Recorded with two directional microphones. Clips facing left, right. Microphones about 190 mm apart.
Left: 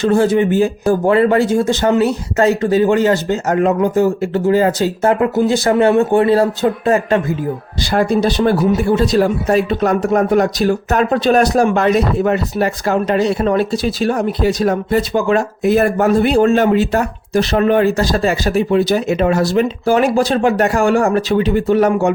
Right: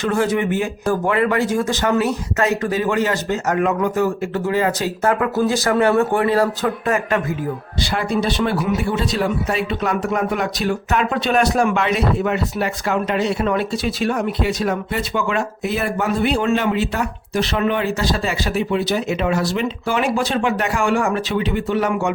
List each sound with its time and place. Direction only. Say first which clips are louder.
0.0 s speech: left 6 dB; 30° left (ahead or behind)
7.8 s speech: left 7 dB; 40° left (ahead or behind)